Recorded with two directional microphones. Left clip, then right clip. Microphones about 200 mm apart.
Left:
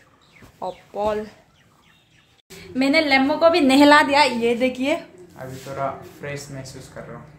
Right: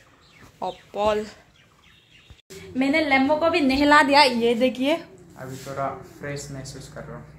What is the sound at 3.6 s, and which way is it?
Speech, 45° left (ahead or behind).